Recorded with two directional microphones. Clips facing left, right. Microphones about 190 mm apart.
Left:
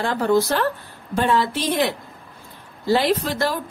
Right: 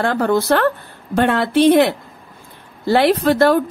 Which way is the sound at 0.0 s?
55° right (ahead or behind).